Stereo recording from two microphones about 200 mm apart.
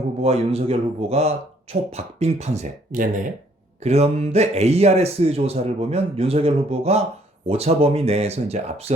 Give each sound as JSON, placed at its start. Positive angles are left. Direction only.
{"t": 0.2, "sound": "speech", "side_deg": -30}